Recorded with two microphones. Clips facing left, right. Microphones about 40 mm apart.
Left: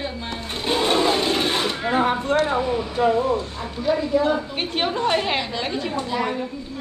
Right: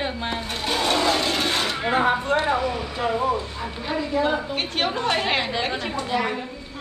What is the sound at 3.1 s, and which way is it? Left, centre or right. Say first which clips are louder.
Speech: left 2 dB; centre.